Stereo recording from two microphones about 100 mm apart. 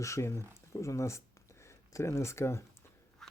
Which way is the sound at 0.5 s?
30° left (ahead or behind).